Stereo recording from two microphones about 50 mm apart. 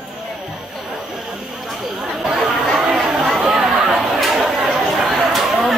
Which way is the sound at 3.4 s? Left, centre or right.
Centre.